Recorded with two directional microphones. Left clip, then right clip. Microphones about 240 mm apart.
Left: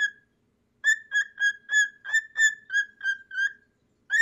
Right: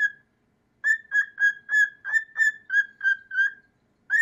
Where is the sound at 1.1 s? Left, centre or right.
Centre.